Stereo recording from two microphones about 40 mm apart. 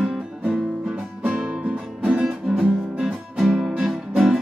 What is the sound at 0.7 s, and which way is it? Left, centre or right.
Music, right.